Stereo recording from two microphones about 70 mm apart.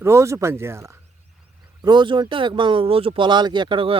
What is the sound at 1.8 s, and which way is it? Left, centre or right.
Speech, right.